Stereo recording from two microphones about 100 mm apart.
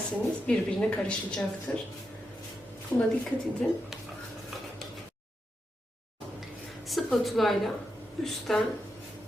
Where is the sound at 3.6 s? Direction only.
10° left (ahead or behind).